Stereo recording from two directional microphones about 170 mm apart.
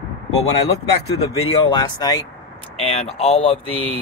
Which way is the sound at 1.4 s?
30° left (ahead or behind).